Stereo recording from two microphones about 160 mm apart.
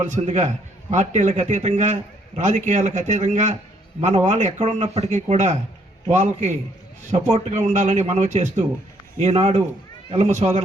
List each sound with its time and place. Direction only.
0.0 s a man's voice: 45° right (ahead or behind)